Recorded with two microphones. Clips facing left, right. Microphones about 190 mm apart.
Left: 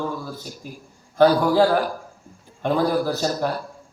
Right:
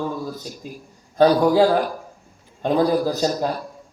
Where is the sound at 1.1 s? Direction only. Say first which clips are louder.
Right 1 dB; 20° right (ahead or behind).